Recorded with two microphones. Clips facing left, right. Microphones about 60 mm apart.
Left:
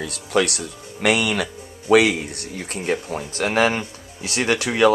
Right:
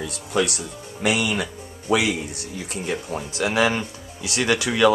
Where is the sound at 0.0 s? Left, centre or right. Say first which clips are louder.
Left 2 dB; left.